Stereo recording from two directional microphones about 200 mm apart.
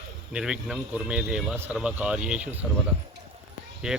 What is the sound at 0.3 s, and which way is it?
Speech, 5° right (ahead or behind).